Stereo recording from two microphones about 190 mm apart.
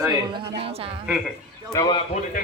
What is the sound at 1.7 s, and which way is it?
Speech, 20° left (ahead or behind).